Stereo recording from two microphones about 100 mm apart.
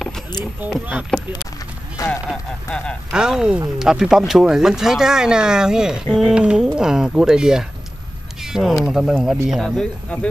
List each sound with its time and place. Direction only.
1.1 s speech: 10° left (ahead or behind)
2.0 s speech: 35° left (ahead or behind)
2.7 s speech: 10° left (ahead or behind)
3.1 s speech: 5° right (ahead or behind)
10.0 s speech: 10° left (ahead or behind)